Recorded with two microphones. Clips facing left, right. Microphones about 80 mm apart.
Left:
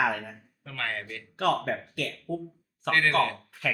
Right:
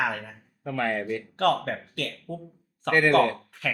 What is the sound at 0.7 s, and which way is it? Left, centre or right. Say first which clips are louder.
Speech: right 8 dB; centre.